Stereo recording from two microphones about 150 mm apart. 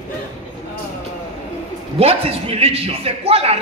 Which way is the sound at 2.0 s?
40° right (ahead or behind).